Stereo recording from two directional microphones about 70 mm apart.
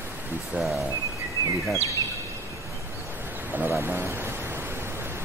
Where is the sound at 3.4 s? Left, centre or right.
Right.